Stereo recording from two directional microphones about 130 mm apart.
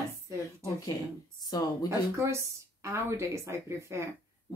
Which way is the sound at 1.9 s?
20° right (ahead or behind).